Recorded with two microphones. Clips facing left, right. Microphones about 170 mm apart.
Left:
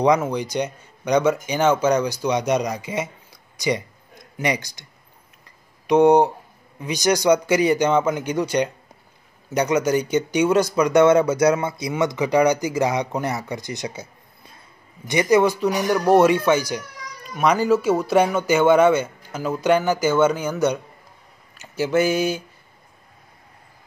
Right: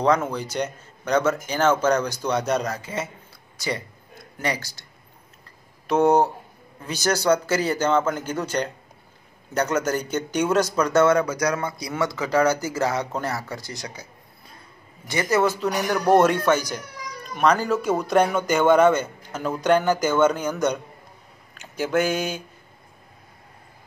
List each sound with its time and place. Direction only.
0.0 s speech: 15° left (ahead or behind)
5.9 s speech: 15° left (ahead or behind)
15.0 s speech: 15° left (ahead or behind)
21.5 s a sound: 5° left (ahead or behind)